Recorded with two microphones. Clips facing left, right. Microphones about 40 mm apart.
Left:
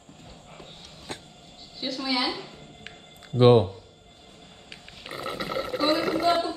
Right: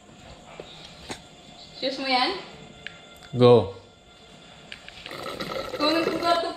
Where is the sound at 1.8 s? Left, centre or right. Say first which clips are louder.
Right 3 dB; centre.